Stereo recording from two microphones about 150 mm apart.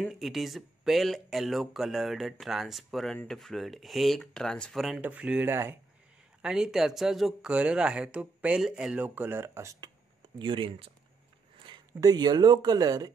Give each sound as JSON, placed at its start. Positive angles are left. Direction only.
{"t": 0.0, "sound": "speech", "side_deg": 0}
{"t": 6.4, "sound": "speech", "side_deg": -5}
{"t": 10.4, "sound": "speech", "side_deg": -35}